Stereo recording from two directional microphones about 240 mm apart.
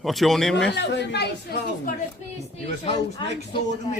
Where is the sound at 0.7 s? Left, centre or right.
Left.